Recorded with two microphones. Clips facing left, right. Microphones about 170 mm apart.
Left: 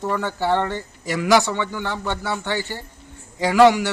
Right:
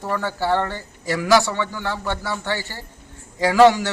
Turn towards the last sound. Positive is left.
turn(degrees=15)  # may be behind; listen again after turning